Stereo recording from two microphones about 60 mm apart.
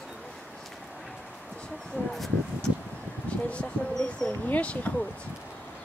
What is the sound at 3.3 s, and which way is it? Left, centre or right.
Speech, left.